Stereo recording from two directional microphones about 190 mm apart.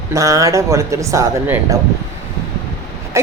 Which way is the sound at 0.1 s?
15° right (ahead or behind).